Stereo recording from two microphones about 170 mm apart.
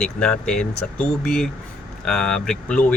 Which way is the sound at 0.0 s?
5° left (ahead or behind).